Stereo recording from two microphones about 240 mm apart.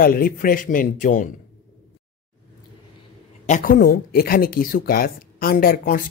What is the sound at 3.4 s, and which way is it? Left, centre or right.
Speech, left.